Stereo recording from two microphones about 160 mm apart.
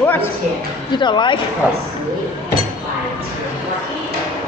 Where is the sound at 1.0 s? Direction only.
30° left (ahead or behind).